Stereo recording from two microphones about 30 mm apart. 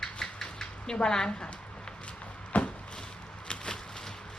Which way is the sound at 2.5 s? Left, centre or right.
Left.